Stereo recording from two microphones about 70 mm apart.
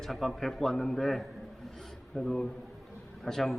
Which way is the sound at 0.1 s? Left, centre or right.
Centre.